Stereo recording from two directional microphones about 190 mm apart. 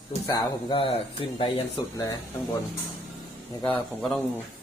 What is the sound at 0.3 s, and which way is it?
Speech, 25° left (ahead or behind).